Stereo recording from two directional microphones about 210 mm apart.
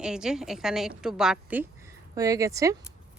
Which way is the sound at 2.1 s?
15° right (ahead or behind).